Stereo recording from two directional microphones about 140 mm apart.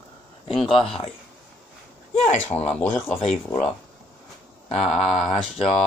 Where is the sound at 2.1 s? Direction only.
50° left (ahead or behind).